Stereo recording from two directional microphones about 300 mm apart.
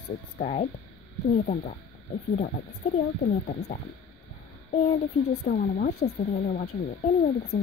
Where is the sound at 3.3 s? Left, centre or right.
Left.